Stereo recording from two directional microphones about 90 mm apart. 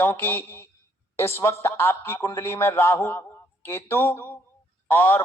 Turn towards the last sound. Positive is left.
turn(degrees=20)  # may be behind; listen again after turning